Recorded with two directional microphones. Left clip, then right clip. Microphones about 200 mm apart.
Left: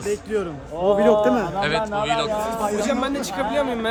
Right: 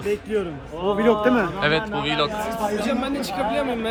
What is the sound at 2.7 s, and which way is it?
Speech, 25° left (ahead or behind).